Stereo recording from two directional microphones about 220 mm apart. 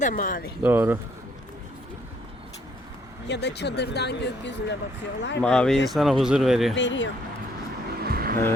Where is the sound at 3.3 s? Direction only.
50° left (ahead or behind).